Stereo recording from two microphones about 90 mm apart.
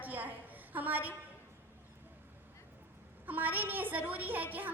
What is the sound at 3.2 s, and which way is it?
A woman's voice, 20° right (ahead or behind).